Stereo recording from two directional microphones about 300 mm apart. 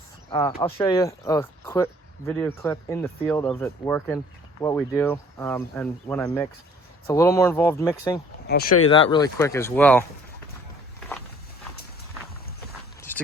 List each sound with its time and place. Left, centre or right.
0.3 s speech: centre
8.4 s speech: left
8.9 s speech: centre
13.1 s a sound: centre